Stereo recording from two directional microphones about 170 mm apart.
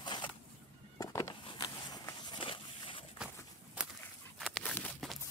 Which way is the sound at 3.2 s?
5° right (ahead or behind).